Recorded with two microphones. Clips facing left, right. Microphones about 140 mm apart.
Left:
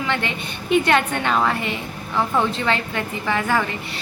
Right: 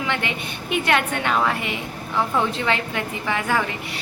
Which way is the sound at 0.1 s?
10° right (ahead or behind).